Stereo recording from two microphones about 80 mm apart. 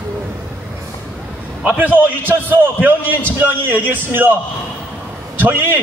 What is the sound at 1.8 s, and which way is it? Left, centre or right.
A man's voice, right.